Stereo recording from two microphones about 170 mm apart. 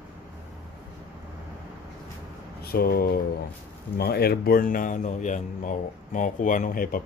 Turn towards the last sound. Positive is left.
turn(degrees=55)  # may be behind; listen again after turning